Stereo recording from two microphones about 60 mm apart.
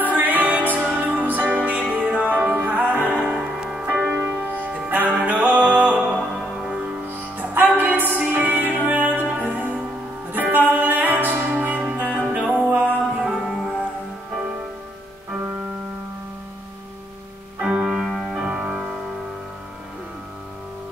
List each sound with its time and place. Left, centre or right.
0.0 s music: right
3.3 s music: centre
3.8 s music: right
7.3 s music: right; by 12.6 s centre
12.6 s music: right
13.3 s music: centre
17.6 s music: centre
17.8 s music: centre
18.3 s music: centre